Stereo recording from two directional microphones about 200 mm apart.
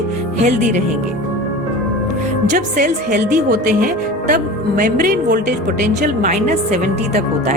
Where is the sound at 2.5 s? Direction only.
40° right (ahead or behind).